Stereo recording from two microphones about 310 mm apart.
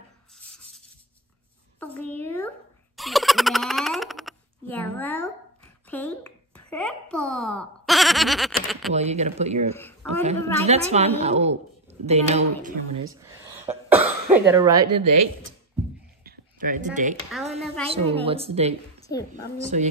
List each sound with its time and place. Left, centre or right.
2.0 s a sound: centre
8.9 s a woman's voice: right
9.8 s speech: centre
10.2 s a woman's voice: right
13.1 s speech: centre
16.3 s a sound: right
17.8 s a woman's voice: centre
18.9 s a sound: centre
19.3 s a woman's voice: right